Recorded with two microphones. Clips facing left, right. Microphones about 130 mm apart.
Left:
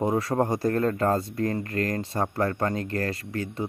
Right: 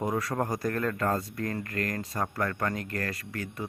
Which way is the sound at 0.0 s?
25° left (ahead or behind).